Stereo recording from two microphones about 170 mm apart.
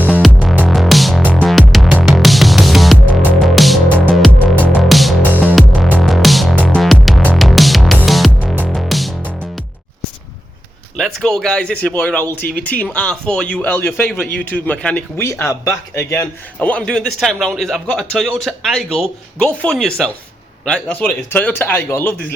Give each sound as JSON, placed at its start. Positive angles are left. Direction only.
{"t": 0.3, "sound": "music", "side_deg": 10}
{"t": 3.8, "sound": "music", "side_deg": -10}
{"t": 4.4, "sound": "music", "side_deg": 10}
{"t": 5.2, "sound": "music", "side_deg": -10}
{"t": 10.9, "sound": "speech", "side_deg": 5}
{"t": 12.4, "sound": "speech", "side_deg": 60}
{"t": 12.6, "sound": "a man's voice", "side_deg": 10}